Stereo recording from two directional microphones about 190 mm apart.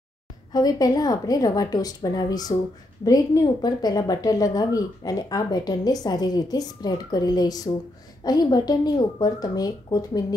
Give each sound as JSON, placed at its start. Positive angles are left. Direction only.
{"t": 0.5, "sound": "a woman's voice", "side_deg": 20}